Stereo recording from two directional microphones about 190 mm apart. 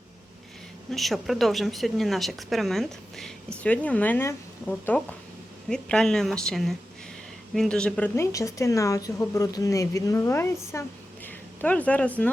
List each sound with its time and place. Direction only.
0.9 s a woman's voice: centre (ahead or behind)